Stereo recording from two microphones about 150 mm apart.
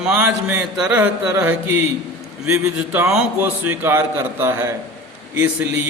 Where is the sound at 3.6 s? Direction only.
15° right (ahead or behind).